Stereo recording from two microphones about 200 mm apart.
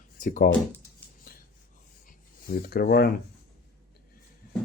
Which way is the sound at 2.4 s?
50° left (ahead or behind).